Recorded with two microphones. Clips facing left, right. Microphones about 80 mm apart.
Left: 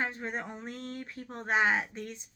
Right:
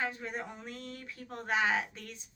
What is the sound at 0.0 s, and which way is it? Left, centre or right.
A woman's voice, left.